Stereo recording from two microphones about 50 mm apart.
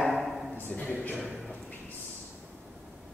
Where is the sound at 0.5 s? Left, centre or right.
Left.